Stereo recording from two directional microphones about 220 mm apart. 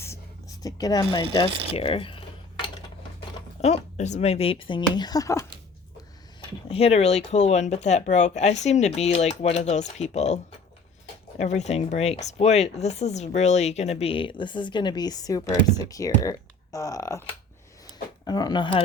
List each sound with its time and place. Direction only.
0.0 s a sound: 15° left (ahead or behind)
3.2 s speech: 30° left (ahead or behind); by 5.5 s 15° left (ahead or behind)
6.7 s speech: 25° left (ahead or behind)